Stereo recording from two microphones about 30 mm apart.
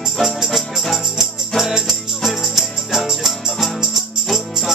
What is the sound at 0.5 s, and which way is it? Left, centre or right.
Music, centre.